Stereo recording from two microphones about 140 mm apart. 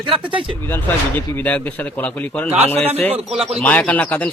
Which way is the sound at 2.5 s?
50° right (ahead or behind).